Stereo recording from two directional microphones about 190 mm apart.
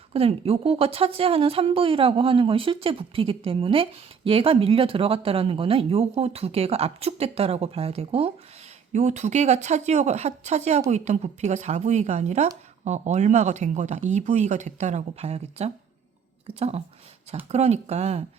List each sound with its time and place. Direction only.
0.1 s a woman's voice: 30° right (ahead or behind)